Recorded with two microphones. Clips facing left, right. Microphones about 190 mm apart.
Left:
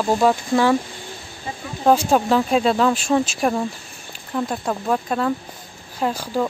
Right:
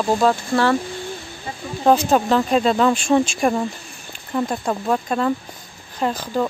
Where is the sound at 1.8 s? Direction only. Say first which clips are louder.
Even; 5° left (ahead or behind).